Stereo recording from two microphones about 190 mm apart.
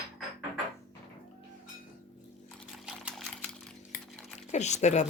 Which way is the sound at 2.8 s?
Centre (ahead or behind).